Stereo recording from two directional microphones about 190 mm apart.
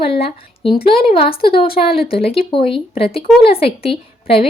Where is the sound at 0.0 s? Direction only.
30° left (ahead or behind).